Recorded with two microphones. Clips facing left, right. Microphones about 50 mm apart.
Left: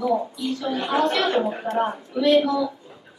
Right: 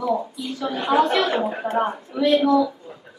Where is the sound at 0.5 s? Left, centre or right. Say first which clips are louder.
Right 4 dB; centre.